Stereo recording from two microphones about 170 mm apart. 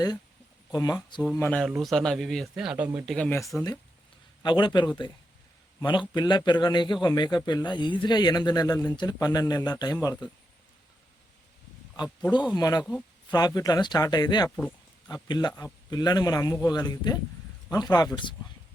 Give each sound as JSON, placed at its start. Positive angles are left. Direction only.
{"t": 0.7, "sound": "a man's voice", "side_deg": 20}
{"t": 1.3, "sound": "speech", "side_deg": 10}
{"t": 3.2, "sound": "speech", "side_deg": 15}
{"t": 4.4, "sound": "a man's voice", "side_deg": 25}
{"t": 12.0, "sound": "a man's voice", "side_deg": 25}
{"t": 14.5, "sound": "a sound", "side_deg": 10}
{"t": 15.1, "sound": "a man's voice", "side_deg": 25}